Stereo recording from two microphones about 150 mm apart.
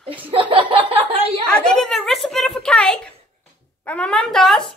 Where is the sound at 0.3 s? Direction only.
35° right (ahead or behind).